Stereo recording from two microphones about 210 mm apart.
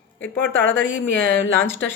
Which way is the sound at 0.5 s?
65° left (ahead or behind).